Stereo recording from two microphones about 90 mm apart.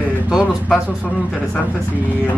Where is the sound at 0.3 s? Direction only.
5° right (ahead or behind).